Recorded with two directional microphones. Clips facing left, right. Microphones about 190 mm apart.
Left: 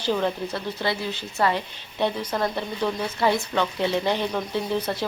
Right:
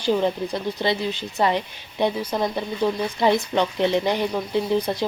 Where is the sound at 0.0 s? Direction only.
15° right (ahead or behind).